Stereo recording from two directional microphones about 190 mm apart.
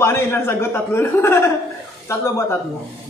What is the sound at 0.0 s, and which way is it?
A man's voice, 15° left (ahead or behind).